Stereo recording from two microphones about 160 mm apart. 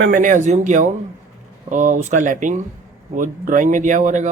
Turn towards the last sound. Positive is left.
turn(degrees=-50)  # may be behind; listen again after turning